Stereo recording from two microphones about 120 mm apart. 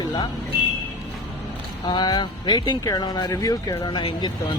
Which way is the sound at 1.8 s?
35° left (ahead or behind).